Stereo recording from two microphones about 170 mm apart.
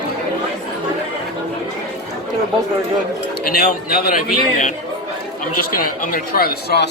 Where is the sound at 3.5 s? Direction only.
65° left (ahead or behind).